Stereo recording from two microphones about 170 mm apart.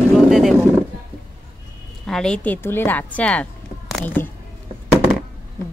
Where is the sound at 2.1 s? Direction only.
5° left (ahead or behind).